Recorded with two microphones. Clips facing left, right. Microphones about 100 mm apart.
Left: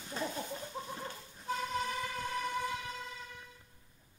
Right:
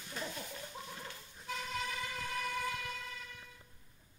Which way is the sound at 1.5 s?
40° left (ahead or behind).